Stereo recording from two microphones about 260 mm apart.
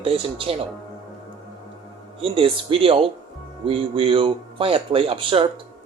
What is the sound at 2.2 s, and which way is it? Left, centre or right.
A man's voice, centre.